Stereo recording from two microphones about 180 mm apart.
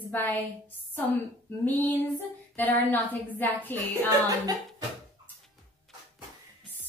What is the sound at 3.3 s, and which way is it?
Speech, 10° left (ahead or behind).